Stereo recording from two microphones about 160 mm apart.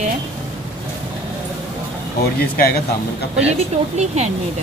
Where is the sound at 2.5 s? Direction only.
70° left (ahead or behind).